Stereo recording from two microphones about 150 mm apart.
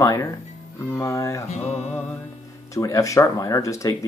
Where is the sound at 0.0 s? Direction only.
25° left (ahead or behind).